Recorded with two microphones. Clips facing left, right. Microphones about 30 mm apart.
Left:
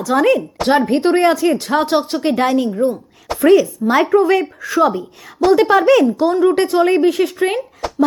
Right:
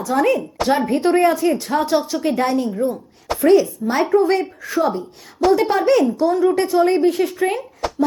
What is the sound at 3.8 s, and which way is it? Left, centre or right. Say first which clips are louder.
Speech: left 6 dB; left.